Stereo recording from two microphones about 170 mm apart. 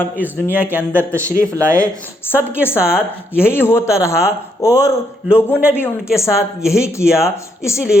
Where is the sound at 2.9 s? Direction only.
15° left (ahead or behind).